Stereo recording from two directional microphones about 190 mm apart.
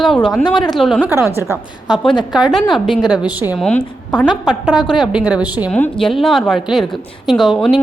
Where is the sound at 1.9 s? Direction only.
25° left (ahead or behind).